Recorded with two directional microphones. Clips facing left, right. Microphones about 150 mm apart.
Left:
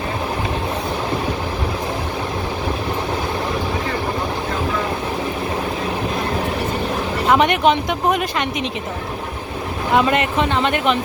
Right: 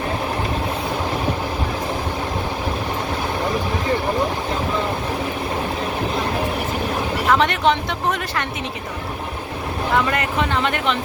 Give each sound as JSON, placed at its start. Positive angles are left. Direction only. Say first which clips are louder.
{"t": 7.3, "sound": "speech", "louder": "left 3 dB", "side_deg": 20}
{"t": 9.9, "sound": "speech", "louder": "left 4 dB", "side_deg": 20}